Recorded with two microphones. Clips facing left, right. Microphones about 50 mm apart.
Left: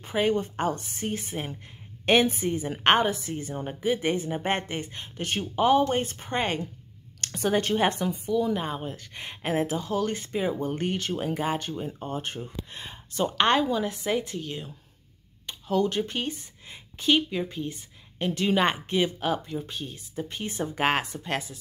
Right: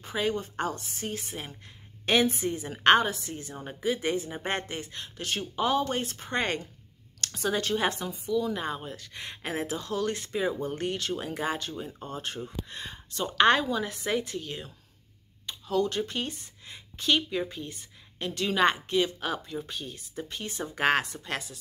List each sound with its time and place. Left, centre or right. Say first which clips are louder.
0.0 s speech: left 5 dB; left
0.7 s a woman's voice: left 5 dB; left
1.0 s speech: left 5 dB; left
3.9 s speech: left 3 dB; left; by 6.7 s centre
7.2 s a woman's voice: left 4 dB; left
8.5 s speech: left 3 dB; centre
11.7 s speech: left 4 dB; centre
12.0 s speech: left 3 dB; centre
13.4 s a woman's voice: right 1 dB; centre
15.7 s speech: left 2 dB; centre
19.1 s speech: left 4 dB; centre
20.2 s speech: left 5 dB; left